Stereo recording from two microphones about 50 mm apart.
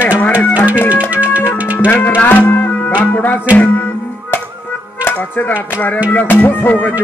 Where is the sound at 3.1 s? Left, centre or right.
Left.